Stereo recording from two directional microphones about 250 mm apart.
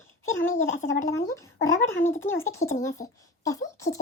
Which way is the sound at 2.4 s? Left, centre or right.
Centre.